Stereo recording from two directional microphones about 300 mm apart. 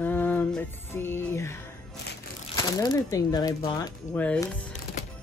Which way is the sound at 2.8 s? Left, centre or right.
Centre.